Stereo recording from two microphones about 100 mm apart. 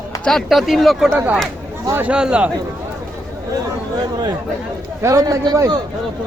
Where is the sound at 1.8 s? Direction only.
20° right (ahead or behind).